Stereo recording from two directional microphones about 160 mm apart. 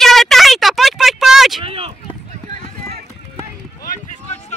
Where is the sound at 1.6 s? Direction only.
35° right (ahead or behind).